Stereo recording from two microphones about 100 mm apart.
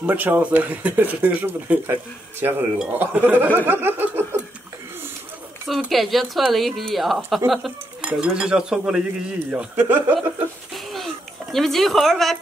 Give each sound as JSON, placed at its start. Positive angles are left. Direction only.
{"t": 0.0, "sound": "speech", "side_deg": -15}
{"t": 5.9, "sound": "speech", "side_deg": 0}
{"t": 8.0, "sound": "speech", "side_deg": -10}
{"t": 10.7, "sound": "a sound", "side_deg": 0}
{"t": 11.5, "sound": "speech", "side_deg": 0}